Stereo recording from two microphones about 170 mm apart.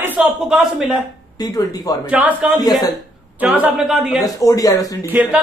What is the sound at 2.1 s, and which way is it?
A man's voice, 10° right (ahead or behind).